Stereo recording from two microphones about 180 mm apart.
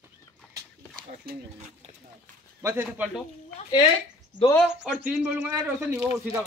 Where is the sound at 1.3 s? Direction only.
60° right (ahead or behind).